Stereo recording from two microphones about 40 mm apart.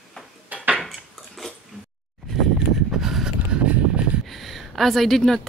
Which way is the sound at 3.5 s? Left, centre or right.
Right.